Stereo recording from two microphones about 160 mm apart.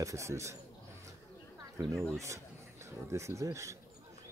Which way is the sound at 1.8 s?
15° right (ahead or behind).